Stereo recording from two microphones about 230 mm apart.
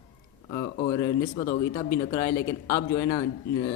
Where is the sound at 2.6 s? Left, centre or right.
Centre.